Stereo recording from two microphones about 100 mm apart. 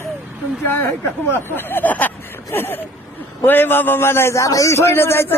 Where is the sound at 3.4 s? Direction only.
20° left (ahead or behind).